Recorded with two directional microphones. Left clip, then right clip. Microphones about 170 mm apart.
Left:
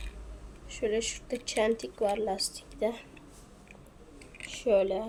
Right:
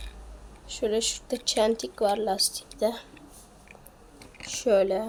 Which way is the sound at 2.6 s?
65° right (ahead or behind).